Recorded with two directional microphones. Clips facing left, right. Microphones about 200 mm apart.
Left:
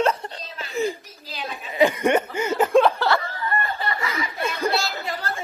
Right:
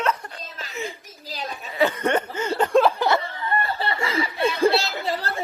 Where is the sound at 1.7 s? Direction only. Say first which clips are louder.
Left 3 dB; 10° left (ahead or behind).